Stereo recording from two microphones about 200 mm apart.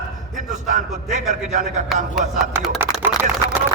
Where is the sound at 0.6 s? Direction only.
40° right (ahead or behind).